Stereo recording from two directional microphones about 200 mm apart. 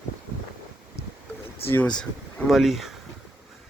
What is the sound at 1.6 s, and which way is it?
Speech, 10° left (ahead or behind).